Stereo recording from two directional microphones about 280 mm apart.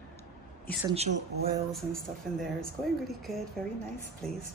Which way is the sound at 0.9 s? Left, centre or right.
Right.